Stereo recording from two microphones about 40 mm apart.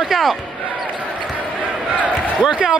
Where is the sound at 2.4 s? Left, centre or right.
Centre.